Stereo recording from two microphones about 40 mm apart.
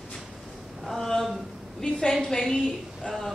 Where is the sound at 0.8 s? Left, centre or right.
Centre.